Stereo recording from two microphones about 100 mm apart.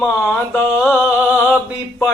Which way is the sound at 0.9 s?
15° right (ahead or behind).